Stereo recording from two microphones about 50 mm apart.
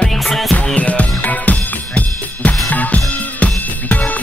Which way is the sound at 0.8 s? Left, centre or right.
Left.